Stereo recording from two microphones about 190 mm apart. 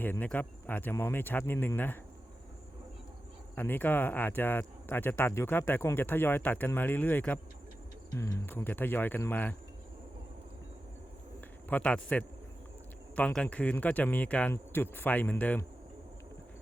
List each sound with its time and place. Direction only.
0.0 s speech: 10° left (ahead or behind)
3.5 s speech: 10° left (ahead or behind)
11.3 s cricket: 10° left (ahead or behind)
13.1 s speech: 5° left (ahead or behind)